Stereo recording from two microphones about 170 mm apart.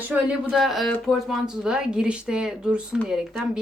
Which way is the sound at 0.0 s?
10° right (ahead or behind).